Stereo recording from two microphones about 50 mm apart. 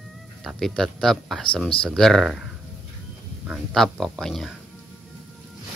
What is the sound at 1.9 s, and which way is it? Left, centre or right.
Speech, centre.